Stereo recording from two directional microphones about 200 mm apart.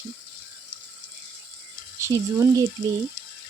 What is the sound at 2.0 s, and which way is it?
Speech, 15° right (ahead or behind).